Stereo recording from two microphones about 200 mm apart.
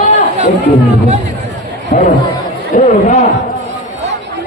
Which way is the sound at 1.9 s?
40° left (ahead or behind).